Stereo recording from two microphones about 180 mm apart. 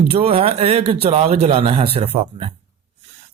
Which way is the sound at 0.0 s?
35° right (ahead or behind).